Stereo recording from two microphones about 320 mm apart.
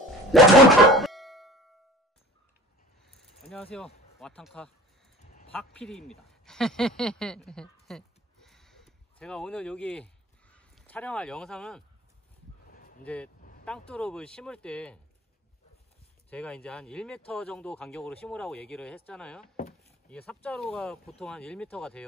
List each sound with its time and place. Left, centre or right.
0.3 s music: centre
3.1 s rattle: centre
3.7 s speech: centre
7.8 s a sound: centre
12.6 s a sound: left
13.0 s speech: centre
13.4 s vehicle: left
13.7 s speech: centre
16.3 s speech: centre